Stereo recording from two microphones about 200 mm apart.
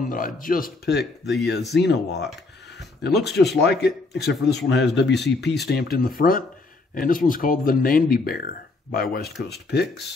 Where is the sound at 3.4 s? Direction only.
55° left (ahead or behind).